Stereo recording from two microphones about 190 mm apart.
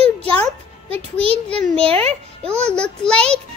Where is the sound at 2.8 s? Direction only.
5° left (ahead or behind).